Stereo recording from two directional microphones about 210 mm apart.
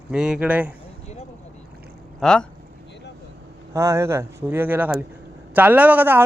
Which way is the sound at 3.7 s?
15° right (ahead or behind).